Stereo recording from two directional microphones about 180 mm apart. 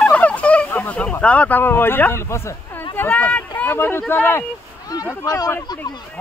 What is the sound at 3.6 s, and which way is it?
Speech, 10° left (ahead or behind).